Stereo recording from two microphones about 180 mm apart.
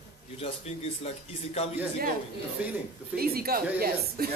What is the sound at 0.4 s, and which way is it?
Speech, 35° left (ahead or behind).